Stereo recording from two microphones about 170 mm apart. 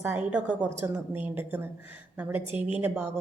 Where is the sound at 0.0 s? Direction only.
10° right (ahead or behind).